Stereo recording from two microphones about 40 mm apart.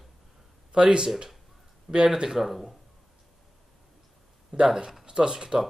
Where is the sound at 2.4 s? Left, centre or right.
Centre.